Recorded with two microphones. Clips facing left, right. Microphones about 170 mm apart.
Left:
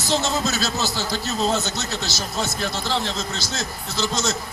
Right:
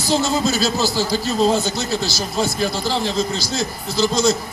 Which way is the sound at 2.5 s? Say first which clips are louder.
Right 4 dB; 10° right (ahead or behind).